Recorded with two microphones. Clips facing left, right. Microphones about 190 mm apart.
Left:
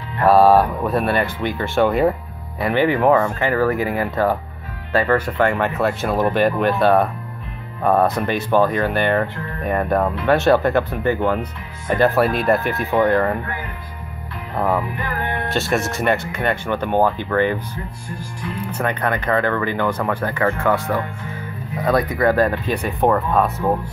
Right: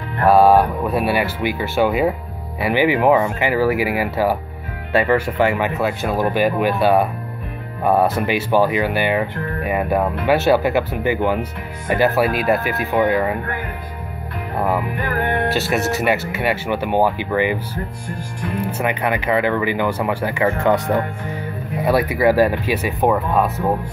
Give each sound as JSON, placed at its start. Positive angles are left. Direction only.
{"t": 0.3, "sound": "speech", "side_deg": 0}
{"t": 14.6, "sound": "speech", "side_deg": -10}
{"t": 15.0, "sound": "music", "side_deg": -50}
{"t": 15.5, "sound": "speech", "side_deg": -5}
{"t": 18.7, "sound": "speech", "side_deg": -10}
{"t": 21.8, "sound": "speech", "side_deg": -10}